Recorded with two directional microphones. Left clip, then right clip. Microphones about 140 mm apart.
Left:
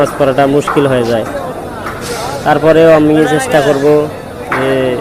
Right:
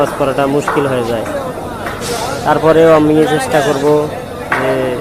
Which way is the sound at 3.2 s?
80° left.